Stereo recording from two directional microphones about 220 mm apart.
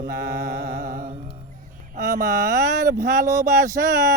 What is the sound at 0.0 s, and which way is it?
Mantra, 45° right (ahead or behind).